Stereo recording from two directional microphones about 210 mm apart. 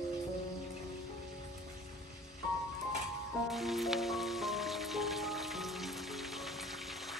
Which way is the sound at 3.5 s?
Centre (ahead or behind).